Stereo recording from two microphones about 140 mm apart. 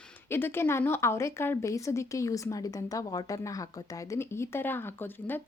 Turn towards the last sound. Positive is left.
turn(degrees=15)  # may be behind; listen again after turning